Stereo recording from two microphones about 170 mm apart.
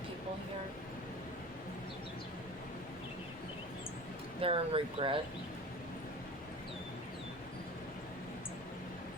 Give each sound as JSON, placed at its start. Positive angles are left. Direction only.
{"t": 4.4, "sound": "speech", "side_deg": -35}